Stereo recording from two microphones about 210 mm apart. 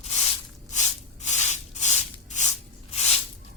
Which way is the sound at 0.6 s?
35° left (ahead or behind).